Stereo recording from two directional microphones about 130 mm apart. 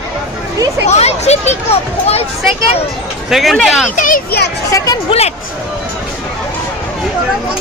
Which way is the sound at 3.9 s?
90° left.